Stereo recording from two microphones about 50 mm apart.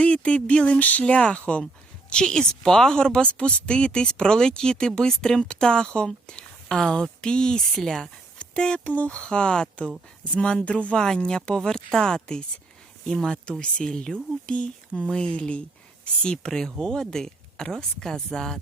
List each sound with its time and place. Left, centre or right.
0.0 s a woman's voice: left
8.4 s dog: centre
9.0 s speech: left
10.9 s a woman's voice: centre
13.6 s a woman's voice: left